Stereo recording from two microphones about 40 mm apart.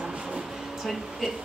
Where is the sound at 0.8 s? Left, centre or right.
Centre.